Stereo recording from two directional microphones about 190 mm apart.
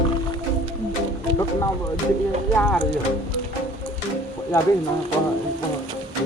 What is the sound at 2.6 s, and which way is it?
Speech, 5° left (ahead or behind).